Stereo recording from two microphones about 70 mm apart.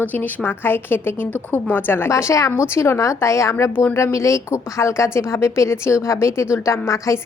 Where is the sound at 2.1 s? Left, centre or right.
Left.